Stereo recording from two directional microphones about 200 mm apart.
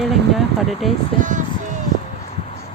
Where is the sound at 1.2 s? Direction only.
40° right (ahead or behind).